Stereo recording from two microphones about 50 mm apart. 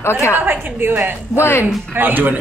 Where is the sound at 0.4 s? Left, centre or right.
Right.